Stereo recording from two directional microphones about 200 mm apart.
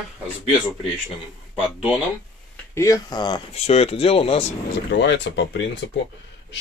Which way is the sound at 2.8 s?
15° left (ahead or behind).